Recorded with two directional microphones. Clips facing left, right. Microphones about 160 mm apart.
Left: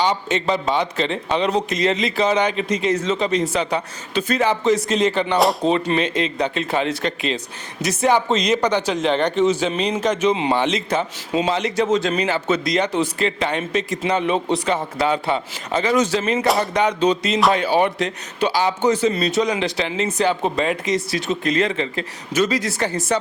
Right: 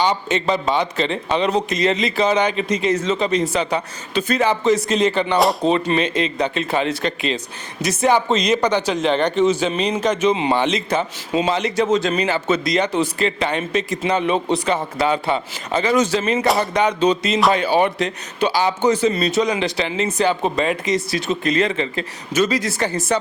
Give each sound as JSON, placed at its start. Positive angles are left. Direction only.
{"t": 0.0, "sound": "a man's voice", "side_deg": -10}
{"t": 14.3, "sound": "speech", "side_deg": -45}
{"t": 14.9, "sound": "a man's voice", "side_deg": -15}